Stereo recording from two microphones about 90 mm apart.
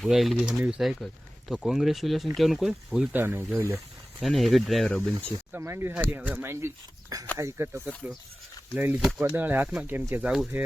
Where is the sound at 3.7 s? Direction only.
Centre (ahead or behind).